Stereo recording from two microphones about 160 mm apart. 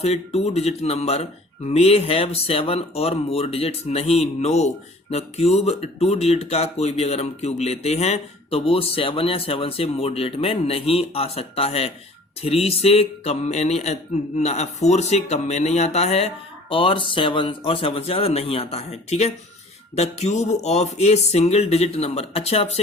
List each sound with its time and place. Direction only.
0.0 s speech: 40° left (ahead or behind)